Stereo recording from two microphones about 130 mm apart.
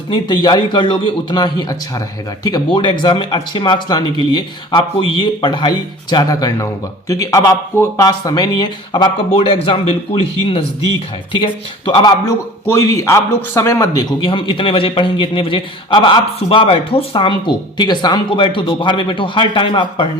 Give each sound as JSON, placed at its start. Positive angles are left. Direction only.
{"t": 0.1, "sound": "a man's voice", "side_deg": 35}
{"t": 9.3, "sound": "speech", "side_deg": 45}
{"t": 11.9, "sound": "a man's voice", "side_deg": 35}
{"t": 12.6, "sound": "a man's voice", "side_deg": 20}